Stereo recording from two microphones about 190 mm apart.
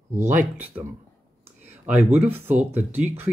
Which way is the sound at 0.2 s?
45° right (ahead or behind).